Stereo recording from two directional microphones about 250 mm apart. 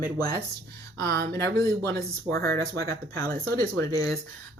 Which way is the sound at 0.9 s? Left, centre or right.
Right.